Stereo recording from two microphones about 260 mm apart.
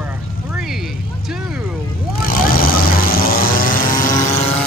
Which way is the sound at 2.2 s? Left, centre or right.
Left.